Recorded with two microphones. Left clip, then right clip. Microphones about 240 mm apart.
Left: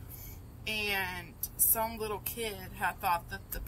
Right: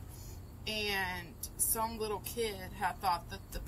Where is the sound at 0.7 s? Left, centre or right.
Left.